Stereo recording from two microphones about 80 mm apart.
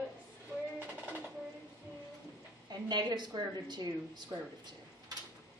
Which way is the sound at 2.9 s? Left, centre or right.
Right.